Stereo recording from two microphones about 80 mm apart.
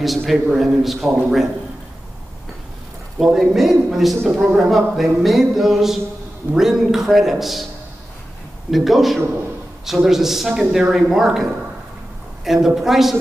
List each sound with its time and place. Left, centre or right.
0.0 s speech: centre
3.3 s speech: centre
4.3 s speech: centre
4.6 s speech: centre
8.6 s speech: centre
12.6 s speech: centre